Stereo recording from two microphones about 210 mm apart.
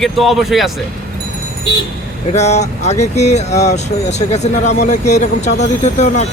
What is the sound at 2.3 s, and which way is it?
Speech, 30° left (ahead or behind).